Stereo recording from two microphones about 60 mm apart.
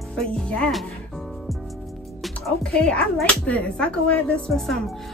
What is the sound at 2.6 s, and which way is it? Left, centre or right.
Speech, centre.